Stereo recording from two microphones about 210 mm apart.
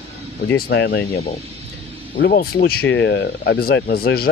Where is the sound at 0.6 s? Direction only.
50° left (ahead or behind).